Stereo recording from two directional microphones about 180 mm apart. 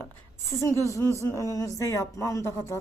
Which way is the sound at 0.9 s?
15° left (ahead or behind).